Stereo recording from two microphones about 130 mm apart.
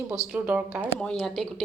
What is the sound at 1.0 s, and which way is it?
Speech, 5° left (ahead or behind).